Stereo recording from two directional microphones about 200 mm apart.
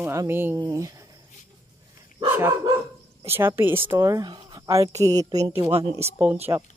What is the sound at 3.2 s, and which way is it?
Speech, 10° right (ahead or behind).